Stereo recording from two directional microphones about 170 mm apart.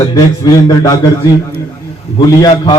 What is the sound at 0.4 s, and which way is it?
Speech, 20° left (ahead or behind).